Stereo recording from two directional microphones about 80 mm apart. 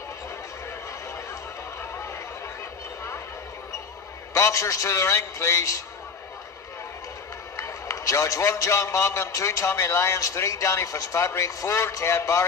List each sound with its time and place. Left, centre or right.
4.3 s a man's voice: left
7.5 s a man's voice: left